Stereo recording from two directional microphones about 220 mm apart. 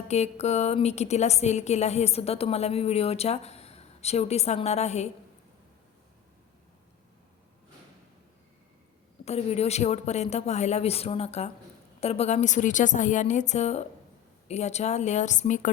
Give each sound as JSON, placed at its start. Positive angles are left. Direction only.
{"t": 0.1, "sound": "a woman's voice", "side_deg": 30}
{"t": 9.2, "sound": "a woman's voice", "side_deg": 30}